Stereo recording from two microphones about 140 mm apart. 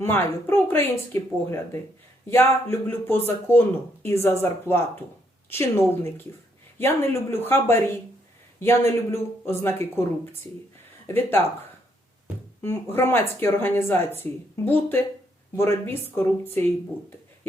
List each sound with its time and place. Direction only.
0.0 s speech: 15° left (ahead or behind)
11.0 s speech: 15° left (ahead or behind)
12.6 s speech: 15° left (ahead or behind)